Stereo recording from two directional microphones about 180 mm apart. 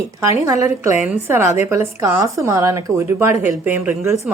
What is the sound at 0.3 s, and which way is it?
A woman's voice, 15° right (ahead or behind).